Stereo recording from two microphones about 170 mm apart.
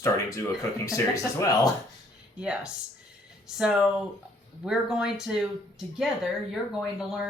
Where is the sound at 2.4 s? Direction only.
5° right (ahead or behind).